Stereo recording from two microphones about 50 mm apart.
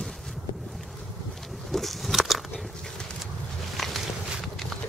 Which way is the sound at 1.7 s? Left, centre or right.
Centre.